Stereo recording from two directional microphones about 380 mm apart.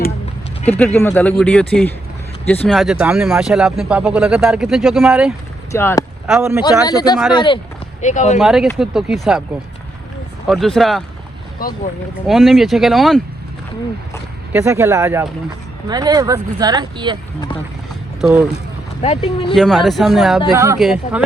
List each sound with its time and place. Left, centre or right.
0.6 s speech: centre
6.6 s speech: centre
8.4 s speech: centre
10.4 s speech: centre
12.3 s speech: centre
14.5 s speech: centre
18.2 s speech: centre
19.0 s speech: centre
19.5 s speech: centre